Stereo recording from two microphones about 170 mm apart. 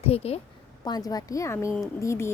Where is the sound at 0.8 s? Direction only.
20° left (ahead or behind).